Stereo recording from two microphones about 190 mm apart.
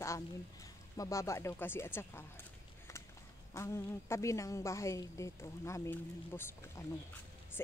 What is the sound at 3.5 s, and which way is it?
A woman's voice, 15° left (ahead or behind).